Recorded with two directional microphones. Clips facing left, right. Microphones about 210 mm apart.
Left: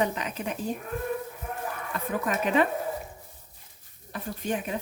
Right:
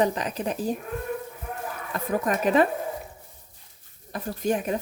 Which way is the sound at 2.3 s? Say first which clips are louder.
Right 3 dB; 40° right (ahead or behind).